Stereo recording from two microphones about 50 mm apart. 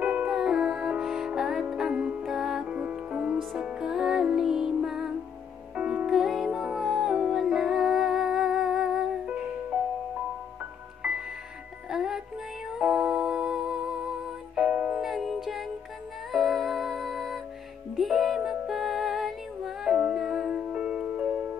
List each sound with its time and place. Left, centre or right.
0.0 s music: right
0.3 s music: centre
2.6 s music: right
3.8 s music: centre
9.2 s music: right
11.0 s music: right
11.9 s music: centre
14.7 s music: right
15.0 s music: centre
19.9 s music: right
20.2 s music: centre